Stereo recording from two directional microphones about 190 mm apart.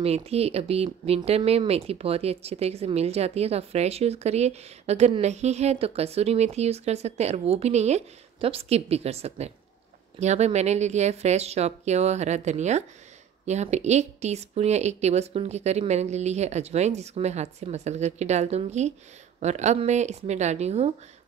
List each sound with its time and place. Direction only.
0.0 s speech: 30° right (ahead or behind)